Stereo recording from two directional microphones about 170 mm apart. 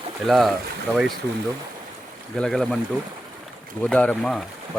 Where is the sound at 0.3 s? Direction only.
Centre (ahead or behind).